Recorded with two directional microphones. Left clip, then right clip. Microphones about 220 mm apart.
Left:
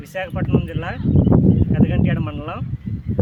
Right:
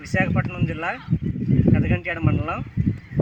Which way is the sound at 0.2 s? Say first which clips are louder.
Left 1 dB; 20° left (ahead or behind).